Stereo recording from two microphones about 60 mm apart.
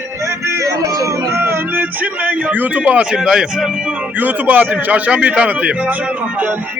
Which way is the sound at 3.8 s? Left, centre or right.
Right.